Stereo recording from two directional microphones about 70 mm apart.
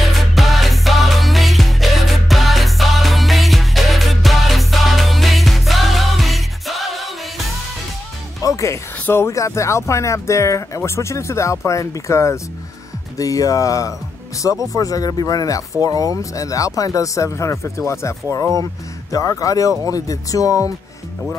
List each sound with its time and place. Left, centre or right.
0.0 s music: centre
8.4 s music: left
9.0 s speech: left